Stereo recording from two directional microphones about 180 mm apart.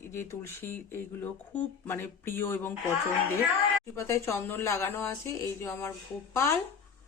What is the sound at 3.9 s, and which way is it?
Speech, 15° left (ahead or behind).